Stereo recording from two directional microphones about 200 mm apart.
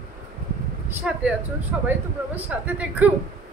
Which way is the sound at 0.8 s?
5° right (ahead or behind).